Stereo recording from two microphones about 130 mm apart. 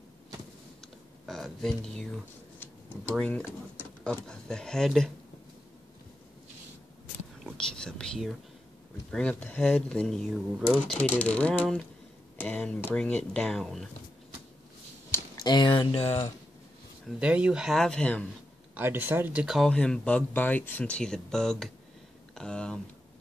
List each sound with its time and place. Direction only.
1.2 s speech: centre (ahead or behind)
7.5 s speech: 5° left (ahead or behind)
15.3 s speech: 35° left (ahead or behind); by 16.3 s 50° left (ahead or behind)
17.2 s speech: 10° right (ahead or behind); by 18.2 s 5° left (ahead or behind)
18.8 s speech: 15° right (ahead or behind)
19.4 s speech: centre (ahead or behind)